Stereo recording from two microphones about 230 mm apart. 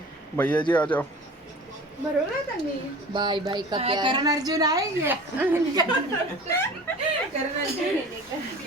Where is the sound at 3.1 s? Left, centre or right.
Centre.